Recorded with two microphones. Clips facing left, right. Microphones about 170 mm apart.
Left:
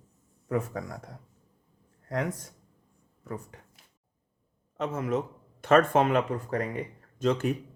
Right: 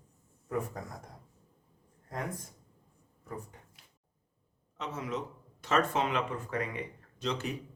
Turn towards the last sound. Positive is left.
turn(degrees=50)  # may be behind; listen again after turning